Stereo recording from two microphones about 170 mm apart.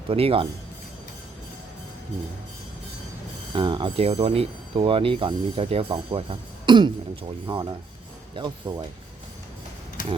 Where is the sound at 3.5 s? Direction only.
30° right (ahead or behind).